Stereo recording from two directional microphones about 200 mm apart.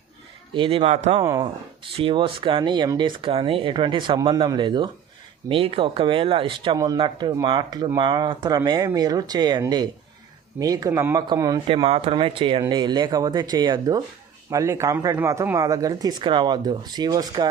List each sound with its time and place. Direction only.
0.5 s speech: 25° right (ahead or behind)
1.2 s speech: 20° right (ahead or behind)
11.7 s speech: 30° right (ahead or behind)